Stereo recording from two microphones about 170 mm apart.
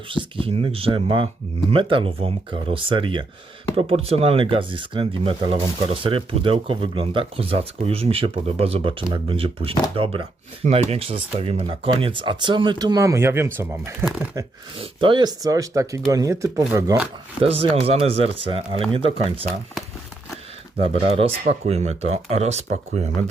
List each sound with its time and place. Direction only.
0.1 s speech: 30° right (ahead or behind)
17.4 s speech: 35° right (ahead or behind)
20.7 s speech: 35° right (ahead or behind)